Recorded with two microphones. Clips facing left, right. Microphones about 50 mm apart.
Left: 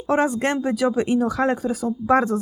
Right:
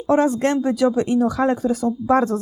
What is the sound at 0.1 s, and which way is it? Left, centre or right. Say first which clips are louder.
Speech: right 3 dB; centre.